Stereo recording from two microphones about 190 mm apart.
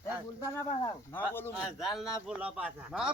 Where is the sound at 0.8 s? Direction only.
10° left (ahead or behind).